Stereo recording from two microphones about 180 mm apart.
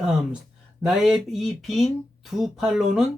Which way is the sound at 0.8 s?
5° right (ahead or behind).